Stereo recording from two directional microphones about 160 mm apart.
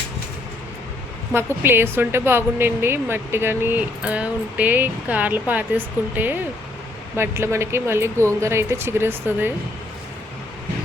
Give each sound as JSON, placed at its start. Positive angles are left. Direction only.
{"t": 1.3, "sound": "a woman's voice", "side_deg": -15}